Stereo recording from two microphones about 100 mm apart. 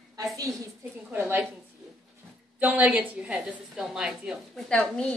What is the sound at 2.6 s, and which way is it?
A woman's voice, 15° right (ahead or behind).